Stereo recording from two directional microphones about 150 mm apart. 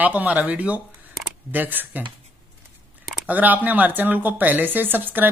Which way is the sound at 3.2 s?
10° right (ahead or behind).